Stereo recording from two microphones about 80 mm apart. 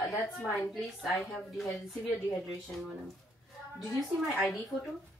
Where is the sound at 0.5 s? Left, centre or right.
Centre.